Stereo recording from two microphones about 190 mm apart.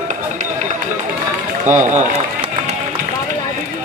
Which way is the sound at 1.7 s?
40° right (ahead or behind).